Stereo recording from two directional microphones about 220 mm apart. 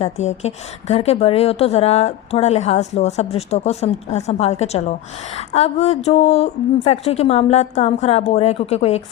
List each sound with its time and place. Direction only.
0.0 s a woman's voice: 30° left (ahead or behind)